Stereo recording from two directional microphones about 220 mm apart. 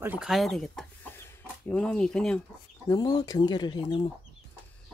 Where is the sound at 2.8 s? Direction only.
20° left (ahead or behind).